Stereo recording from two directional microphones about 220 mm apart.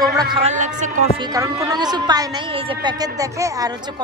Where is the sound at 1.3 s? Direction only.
15° right (ahead or behind).